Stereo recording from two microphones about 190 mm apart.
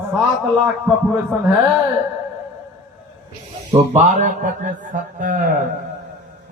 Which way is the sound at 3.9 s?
40° right (ahead or behind).